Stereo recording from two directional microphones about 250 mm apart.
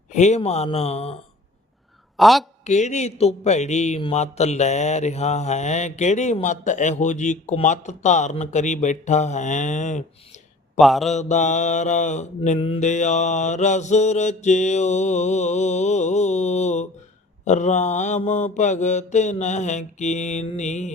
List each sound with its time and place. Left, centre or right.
0.1 s a man's voice: left
2.1 s a woman's voice: centre
2.6 s a man's voice: left
10.8 s mantra: centre
11.1 s a man's voice: left